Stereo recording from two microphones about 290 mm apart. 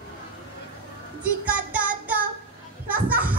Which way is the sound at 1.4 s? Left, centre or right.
Centre.